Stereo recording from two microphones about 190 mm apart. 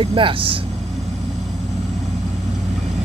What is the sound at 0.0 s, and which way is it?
Speech, 30° right (ahead or behind).